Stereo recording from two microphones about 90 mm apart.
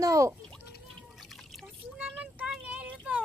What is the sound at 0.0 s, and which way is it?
Speech, 40° right (ahead or behind).